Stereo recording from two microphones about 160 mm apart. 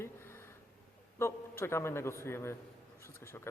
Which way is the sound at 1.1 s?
15° left (ahead or behind).